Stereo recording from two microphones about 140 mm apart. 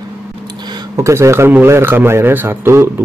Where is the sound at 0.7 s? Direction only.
25° right (ahead or behind).